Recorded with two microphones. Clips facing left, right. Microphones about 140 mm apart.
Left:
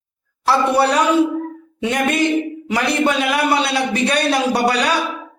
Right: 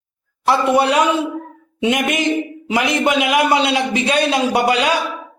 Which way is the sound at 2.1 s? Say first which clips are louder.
Left 1 dB; 15° right (ahead or behind).